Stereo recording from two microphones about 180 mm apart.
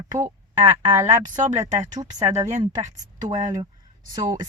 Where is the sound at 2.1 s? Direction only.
40° right (ahead or behind).